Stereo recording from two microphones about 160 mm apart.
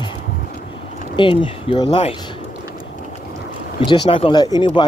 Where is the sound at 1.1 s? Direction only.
30° left (ahead or behind).